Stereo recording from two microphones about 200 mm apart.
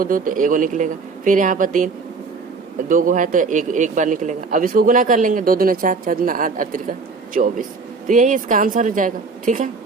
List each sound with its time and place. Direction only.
0.0 s a man's voice: 45° right (ahead or behind)
2.9 s a man's voice: 40° right (ahead or behind)